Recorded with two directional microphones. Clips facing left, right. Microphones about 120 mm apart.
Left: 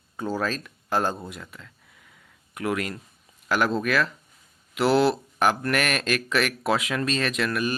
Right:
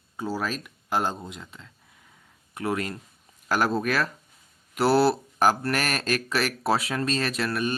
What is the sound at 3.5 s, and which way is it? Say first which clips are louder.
Speech: left 1 dB; 40° right (ahead or behind).